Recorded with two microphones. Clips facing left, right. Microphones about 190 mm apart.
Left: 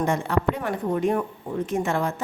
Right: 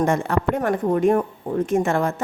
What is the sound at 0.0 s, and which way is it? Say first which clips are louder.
Speech: right 3 dB; 45° right (ahead or behind).